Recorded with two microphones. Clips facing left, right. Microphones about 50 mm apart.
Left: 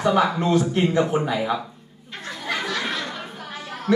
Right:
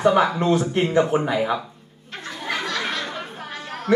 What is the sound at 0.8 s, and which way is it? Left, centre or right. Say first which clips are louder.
Speech: right 1 dB; right.